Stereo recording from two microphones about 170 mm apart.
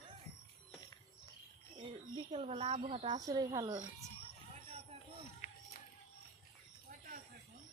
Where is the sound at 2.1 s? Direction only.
35° right (ahead or behind).